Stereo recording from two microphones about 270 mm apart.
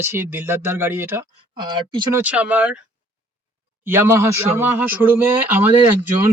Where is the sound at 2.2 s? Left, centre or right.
Centre.